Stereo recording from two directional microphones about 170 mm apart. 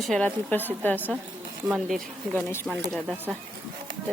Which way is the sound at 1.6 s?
Centre (ahead or behind).